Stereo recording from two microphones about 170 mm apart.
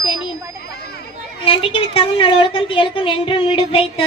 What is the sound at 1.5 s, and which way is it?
A woman's voice, 30° left (ahead or behind).